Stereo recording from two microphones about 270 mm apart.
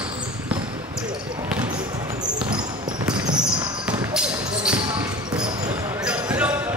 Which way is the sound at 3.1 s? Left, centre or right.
Centre.